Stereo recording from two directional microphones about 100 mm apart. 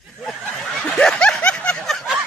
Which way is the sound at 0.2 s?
Centre (ahead or behind).